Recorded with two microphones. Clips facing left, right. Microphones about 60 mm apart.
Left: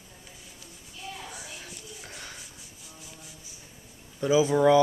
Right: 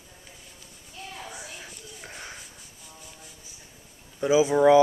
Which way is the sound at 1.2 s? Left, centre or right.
Centre.